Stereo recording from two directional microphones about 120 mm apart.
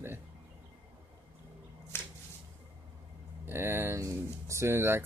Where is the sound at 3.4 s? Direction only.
20° right (ahead or behind).